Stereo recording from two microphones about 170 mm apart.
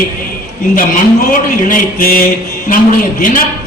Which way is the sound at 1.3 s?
55° left (ahead or behind).